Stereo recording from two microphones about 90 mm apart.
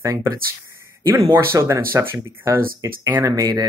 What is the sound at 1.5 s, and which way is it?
Speech, 35° right (ahead or behind).